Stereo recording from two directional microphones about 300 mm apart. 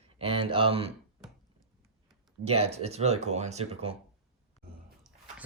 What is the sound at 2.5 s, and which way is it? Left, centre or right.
Speech, centre.